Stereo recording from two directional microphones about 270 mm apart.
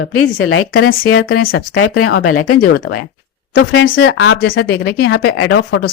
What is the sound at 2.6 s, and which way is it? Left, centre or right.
Speech, left.